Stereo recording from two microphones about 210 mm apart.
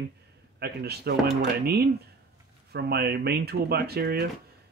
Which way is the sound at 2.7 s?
50° right (ahead or behind).